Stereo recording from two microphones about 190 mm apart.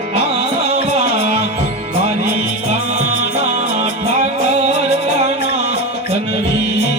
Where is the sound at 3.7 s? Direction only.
35° right (ahead or behind).